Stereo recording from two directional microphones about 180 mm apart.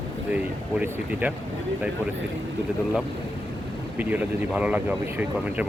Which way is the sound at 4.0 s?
10° right (ahead or behind).